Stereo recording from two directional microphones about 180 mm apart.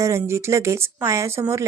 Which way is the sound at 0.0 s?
15° right (ahead or behind).